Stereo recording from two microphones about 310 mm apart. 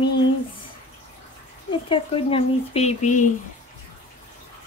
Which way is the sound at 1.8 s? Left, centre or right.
Centre.